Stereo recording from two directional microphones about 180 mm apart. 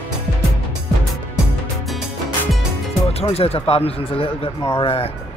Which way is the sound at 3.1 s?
35° left (ahead or behind).